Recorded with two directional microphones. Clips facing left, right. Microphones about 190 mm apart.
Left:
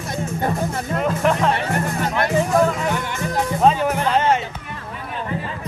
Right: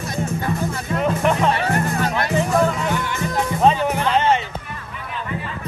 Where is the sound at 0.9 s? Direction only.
Centre (ahead or behind).